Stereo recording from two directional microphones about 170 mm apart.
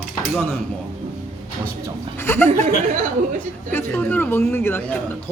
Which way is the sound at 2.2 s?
15° left (ahead or behind).